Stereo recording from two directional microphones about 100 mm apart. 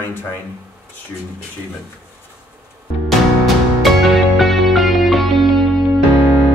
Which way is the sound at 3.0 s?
Centre (ahead or behind).